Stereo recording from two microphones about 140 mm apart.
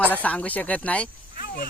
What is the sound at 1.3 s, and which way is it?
Vehicle, 90° left.